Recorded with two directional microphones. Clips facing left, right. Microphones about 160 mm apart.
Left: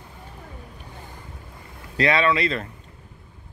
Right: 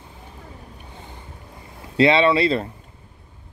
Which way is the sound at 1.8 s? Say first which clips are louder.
Right 5 dB; 25° right (ahead or behind).